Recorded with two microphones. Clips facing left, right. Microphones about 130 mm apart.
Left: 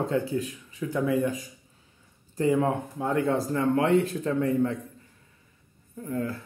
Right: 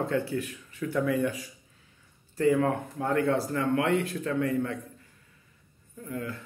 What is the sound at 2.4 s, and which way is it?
Speech, 20° left (ahead or behind).